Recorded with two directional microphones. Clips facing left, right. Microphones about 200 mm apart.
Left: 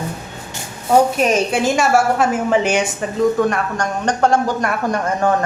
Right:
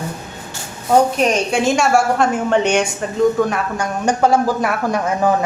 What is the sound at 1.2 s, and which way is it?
A woman's voice, 5° left (ahead or behind).